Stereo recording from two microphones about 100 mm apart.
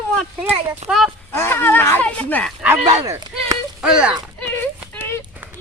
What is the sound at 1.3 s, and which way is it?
Speech, 25° left (ahead or behind).